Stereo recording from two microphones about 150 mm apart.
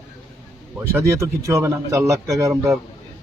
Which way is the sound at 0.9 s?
20° right (ahead or behind).